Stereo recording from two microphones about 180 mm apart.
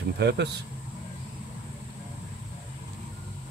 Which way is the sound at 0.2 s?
70° right (ahead or behind).